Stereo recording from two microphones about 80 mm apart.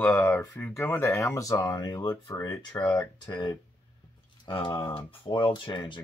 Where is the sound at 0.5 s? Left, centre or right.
Left.